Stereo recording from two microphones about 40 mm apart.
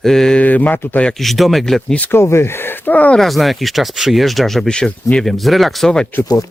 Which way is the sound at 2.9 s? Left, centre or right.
Left.